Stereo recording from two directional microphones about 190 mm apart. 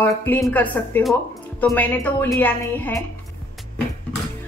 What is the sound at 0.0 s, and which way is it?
A woman's voice, 10° left (ahead or behind).